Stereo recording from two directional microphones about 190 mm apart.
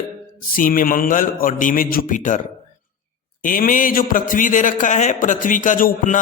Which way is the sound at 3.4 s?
45° left (ahead or behind).